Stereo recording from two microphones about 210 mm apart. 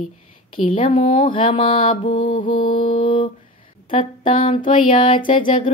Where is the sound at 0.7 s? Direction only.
25° left (ahead or behind).